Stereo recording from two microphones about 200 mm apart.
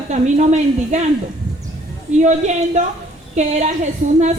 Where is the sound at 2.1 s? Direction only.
35° right (ahead or behind).